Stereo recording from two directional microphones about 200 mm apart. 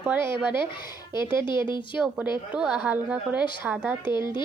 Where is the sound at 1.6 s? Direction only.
25° left (ahead or behind).